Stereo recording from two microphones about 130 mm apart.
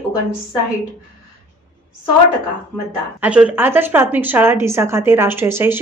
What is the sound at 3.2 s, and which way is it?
A woman's voice, 10° right (ahead or behind).